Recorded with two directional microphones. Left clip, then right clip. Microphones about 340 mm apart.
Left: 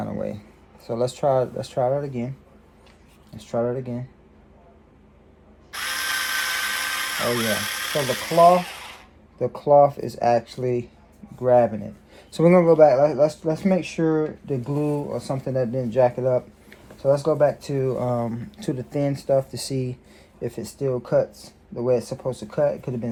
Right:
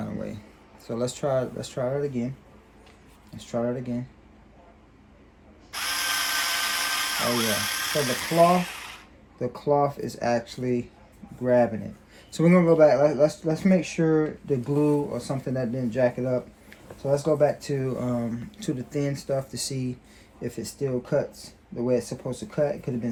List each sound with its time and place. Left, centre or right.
0.0 s a sound: centre
0.9 s speech: centre
3.3 s speech: centre
5.7 s drill: centre
9.4 s speech: centre